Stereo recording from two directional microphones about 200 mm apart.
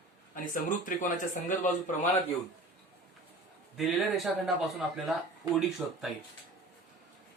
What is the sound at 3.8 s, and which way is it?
Speech, centre (ahead or behind).